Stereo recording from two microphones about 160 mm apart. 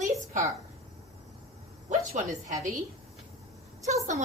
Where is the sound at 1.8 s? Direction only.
50° right (ahead or behind).